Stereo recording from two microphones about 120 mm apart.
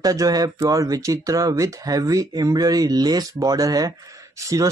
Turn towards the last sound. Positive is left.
turn(degrees=-25)  # may be behind; listen again after turning